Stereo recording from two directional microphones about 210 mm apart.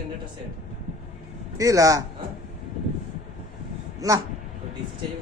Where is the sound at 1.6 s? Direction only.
15° right (ahead or behind).